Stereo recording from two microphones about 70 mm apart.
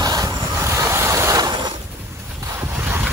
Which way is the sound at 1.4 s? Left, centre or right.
Right.